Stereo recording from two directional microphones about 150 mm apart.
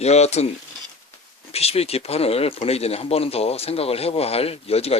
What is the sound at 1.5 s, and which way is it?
Speech, 45° left (ahead or behind).